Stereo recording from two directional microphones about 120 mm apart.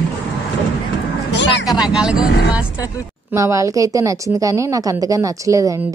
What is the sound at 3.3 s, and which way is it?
A woman's voice, 25° right (ahead or behind).